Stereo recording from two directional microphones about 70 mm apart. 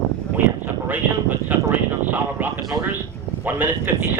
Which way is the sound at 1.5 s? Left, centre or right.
Right.